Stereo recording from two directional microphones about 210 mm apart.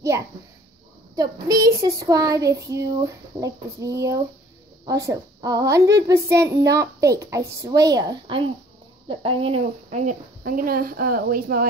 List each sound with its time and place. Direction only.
1.1 s a woman's voice: 15° right (ahead or behind); by 11.6 s 45° right (ahead or behind)